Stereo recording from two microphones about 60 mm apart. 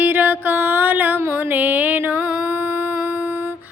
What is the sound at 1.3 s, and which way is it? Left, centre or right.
Music, right.